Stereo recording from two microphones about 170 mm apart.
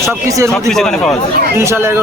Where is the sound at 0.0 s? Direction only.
15° right (ahead or behind).